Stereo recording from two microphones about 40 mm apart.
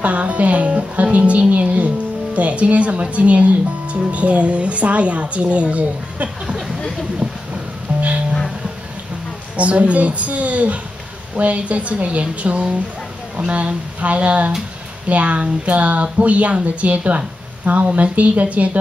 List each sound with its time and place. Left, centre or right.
0.0 s music: right
1.5 s speech: right
6.4 s a sound: centre
7.9 s music: right
9.6 s speech: right